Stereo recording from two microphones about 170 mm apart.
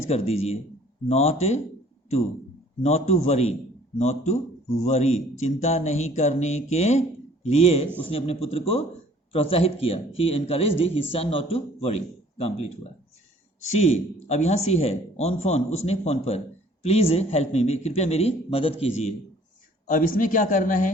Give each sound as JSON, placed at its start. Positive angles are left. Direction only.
{"t": 0.1, "sound": "speech", "side_deg": 40}
{"t": 2.8, "sound": "speech", "side_deg": 40}
{"t": 19.9, "sound": "speech", "side_deg": 50}